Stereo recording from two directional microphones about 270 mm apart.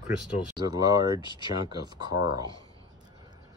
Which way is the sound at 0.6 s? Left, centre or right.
Centre.